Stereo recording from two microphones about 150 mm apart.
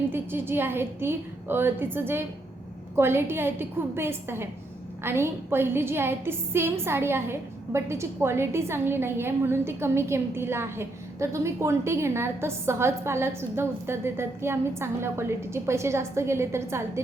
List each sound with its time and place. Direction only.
0.1 s a woman's voice: 15° right (ahead or behind)